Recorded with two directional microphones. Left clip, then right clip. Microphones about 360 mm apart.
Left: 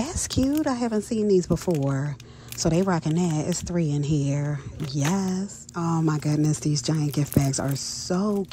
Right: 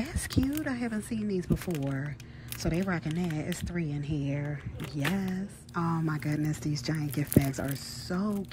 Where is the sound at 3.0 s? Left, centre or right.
Centre.